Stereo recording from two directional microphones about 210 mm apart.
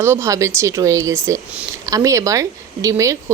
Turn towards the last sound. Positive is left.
turn(degrees=-15)  # may be behind; listen again after turning